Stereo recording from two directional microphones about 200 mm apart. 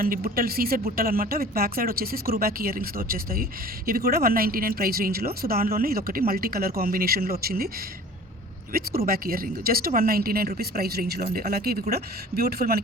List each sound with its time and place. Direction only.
0.0 s speech: 45° right (ahead or behind)
9.0 s speech: 45° right (ahead or behind)